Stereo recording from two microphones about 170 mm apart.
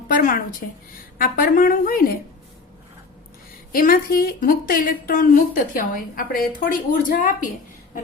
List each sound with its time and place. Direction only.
0.1 s a woman's voice: 50° left (ahead or behind)
3.7 s a woman's voice: 60° left (ahead or behind)